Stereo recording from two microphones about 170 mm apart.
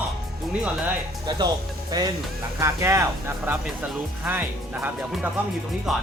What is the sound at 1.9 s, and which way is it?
Speech, 25° right (ahead or behind).